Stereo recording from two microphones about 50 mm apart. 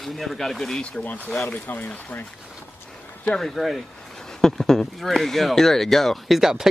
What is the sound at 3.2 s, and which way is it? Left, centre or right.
Speech, centre.